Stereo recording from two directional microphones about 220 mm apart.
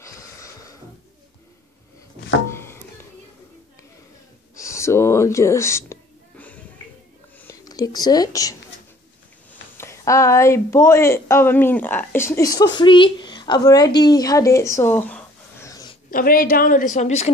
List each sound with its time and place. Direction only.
0.0 s music: 15° left (ahead or behind)
2.4 s music: 10° left (ahead or behind)
4.6 s a sound: 15° left (ahead or behind)
7.3 s speech: 15° left (ahead or behind)
9.8 s a woman's voice: 15° left (ahead or behind)
16.1 s a woman's voice: 40° left (ahead or behind)